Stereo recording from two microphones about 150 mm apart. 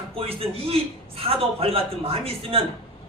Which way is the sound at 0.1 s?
40° right (ahead or behind).